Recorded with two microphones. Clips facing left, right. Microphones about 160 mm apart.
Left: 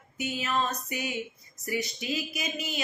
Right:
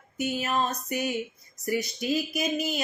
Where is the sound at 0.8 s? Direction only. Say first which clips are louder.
Right 4 dB; 45° right (ahead or behind).